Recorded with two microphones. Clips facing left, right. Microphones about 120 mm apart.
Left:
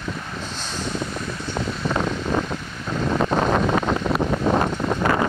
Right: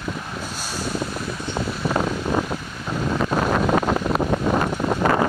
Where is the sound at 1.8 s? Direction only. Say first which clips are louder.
Right 1 dB; 10° right (ahead or behind).